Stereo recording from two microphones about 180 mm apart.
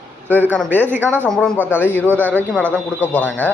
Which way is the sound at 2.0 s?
10° right (ahead or behind).